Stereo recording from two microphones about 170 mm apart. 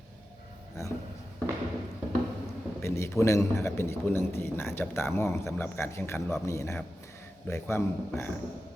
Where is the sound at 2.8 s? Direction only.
15° left (ahead or behind).